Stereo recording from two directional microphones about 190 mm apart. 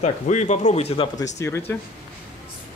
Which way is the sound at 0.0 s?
35° left (ahead or behind).